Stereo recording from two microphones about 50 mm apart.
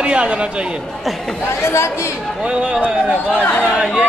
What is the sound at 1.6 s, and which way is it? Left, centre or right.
Speech, left.